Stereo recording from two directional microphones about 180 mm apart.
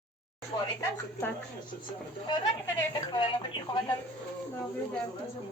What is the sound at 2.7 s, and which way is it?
Speech, 25° left (ahead or behind).